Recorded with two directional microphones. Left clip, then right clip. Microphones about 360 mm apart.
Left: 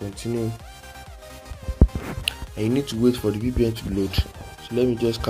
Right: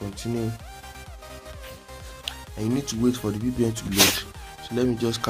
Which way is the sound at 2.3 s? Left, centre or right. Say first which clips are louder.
Left 4 dB; centre.